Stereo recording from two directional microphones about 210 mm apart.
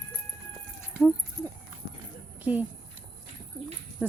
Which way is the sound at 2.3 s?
10° right (ahead or behind).